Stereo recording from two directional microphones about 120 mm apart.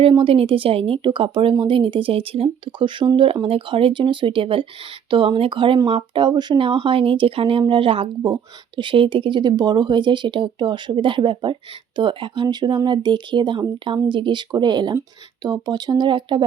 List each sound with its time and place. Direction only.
0.0 s speech: 50° right (ahead or behind)
8.2 s speech: 35° right (ahead or behind)